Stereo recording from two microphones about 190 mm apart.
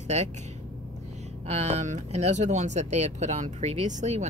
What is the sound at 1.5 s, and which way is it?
Speech, 35° right (ahead or behind).